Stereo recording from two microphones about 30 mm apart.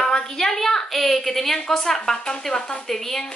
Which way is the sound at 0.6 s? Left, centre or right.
Centre.